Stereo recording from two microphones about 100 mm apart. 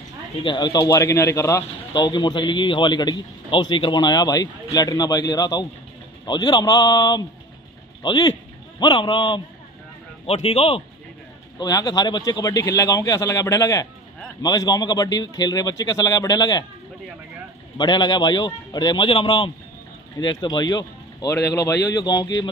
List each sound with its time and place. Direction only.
0.9 s a man's voice: 25° left (ahead or behind)
2.0 s a man's voice: 50° left (ahead or behind)
10.2 s a man's voice: 90° left
11.6 s a man's voice: 45° left (ahead or behind)
17.7 s a man's voice: 50° left (ahead or behind)
20.2 s speech: 45° left (ahead or behind)
21.3 s a man's voice: 30° left (ahead or behind)